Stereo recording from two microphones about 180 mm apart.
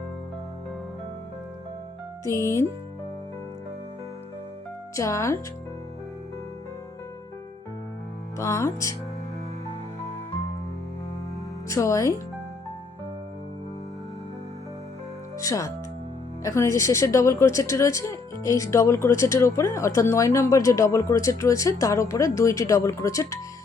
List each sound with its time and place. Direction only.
2.2 s speech: 15° left (ahead or behind)
4.9 s speech: 15° left (ahead or behind)
8.4 s speech: 15° left (ahead or behind)
11.7 s speech: 15° left (ahead or behind)
15.4 s speech: 20° left (ahead or behind)